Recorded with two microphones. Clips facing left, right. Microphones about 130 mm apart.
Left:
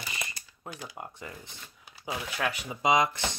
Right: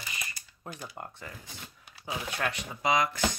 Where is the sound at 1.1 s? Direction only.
20° left (ahead or behind).